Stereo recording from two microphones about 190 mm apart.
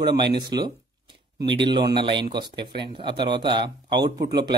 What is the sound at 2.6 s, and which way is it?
Speech, 60° right (ahead or behind).